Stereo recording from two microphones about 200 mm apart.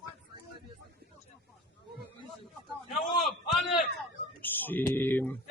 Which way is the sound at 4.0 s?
10° left (ahead or behind).